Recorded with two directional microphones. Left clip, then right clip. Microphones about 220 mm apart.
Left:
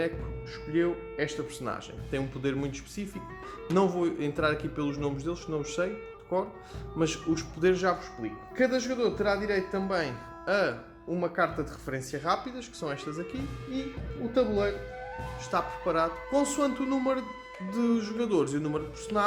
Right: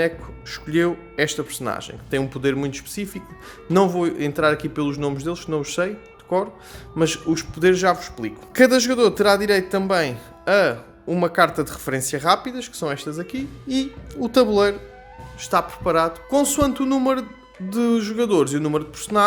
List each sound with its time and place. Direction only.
0.5 s speech: 30° right (ahead or behind)
8.5 s speech: 40° right (ahead or behind); by 13.4 s 20° right (ahead or behind)
14.3 s speech: 35° right (ahead or behind)